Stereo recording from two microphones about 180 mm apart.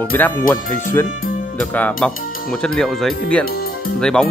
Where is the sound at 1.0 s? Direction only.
50° left (ahead or behind).